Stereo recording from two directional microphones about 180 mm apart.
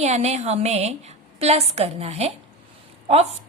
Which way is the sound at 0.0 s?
35° right (ahead or behind).